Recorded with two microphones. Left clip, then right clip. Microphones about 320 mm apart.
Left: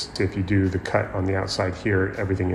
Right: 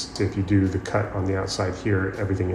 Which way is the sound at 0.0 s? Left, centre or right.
Left.